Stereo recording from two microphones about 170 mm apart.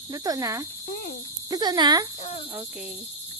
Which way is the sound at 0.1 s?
20° right (ahead or behind).